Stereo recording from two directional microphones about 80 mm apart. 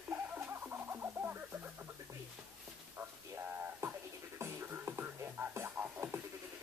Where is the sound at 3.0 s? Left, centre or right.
Right.